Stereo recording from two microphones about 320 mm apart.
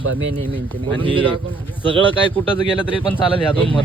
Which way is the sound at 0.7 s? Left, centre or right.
Centre.